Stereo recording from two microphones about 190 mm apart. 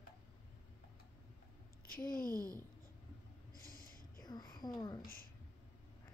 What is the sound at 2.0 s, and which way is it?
Speech, 50° left (ahead or behind).